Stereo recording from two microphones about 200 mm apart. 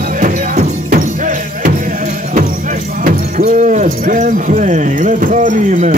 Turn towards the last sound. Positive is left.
turn(degrees=-40)  # may be behind; listen again after turning